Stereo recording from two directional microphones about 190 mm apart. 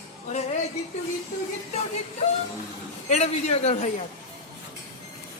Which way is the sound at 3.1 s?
35° left (ahead or behind).